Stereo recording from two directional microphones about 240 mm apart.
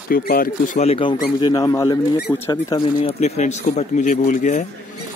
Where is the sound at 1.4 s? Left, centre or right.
Centre.